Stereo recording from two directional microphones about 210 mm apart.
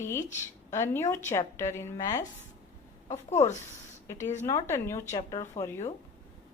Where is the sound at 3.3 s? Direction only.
35° left (ahead or behind).